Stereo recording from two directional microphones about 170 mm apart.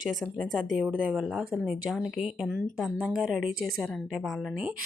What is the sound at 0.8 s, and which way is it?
Speech, 10° right (ahead or behind).